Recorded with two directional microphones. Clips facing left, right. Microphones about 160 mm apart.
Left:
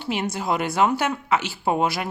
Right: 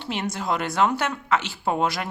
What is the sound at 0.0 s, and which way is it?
Speech, 10° left (ahead or behind).